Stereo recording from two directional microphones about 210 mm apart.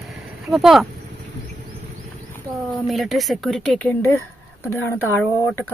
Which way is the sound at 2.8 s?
Centre (ahead or behind).